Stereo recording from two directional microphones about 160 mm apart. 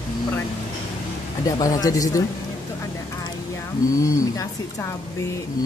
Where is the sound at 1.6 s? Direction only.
20° left (ahead or behind).